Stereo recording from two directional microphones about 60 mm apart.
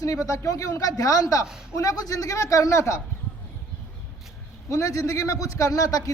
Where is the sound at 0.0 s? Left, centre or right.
Left.